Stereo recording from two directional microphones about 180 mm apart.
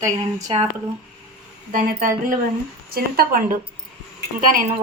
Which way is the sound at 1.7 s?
50° right (ahead or behind).